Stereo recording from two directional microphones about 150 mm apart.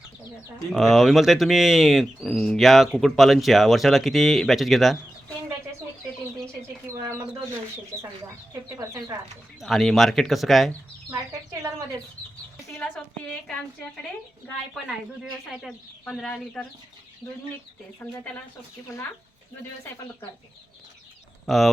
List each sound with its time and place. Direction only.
0.7 s speech: centre (ahead or behind)
6.3 s chicken: 20° right (ahead or behind)
8.8 s speech: 25° right (ahead or behind)
9.6 s speech: centre (ahead or behind)
14.8 s speech: 5° right (ahead or behind)
18.0 s speech: 10° left (ahead or behind)
21.4 s speech: centre (ahead or behind)